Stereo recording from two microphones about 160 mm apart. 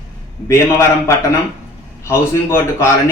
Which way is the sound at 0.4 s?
15° left (ahead or behind).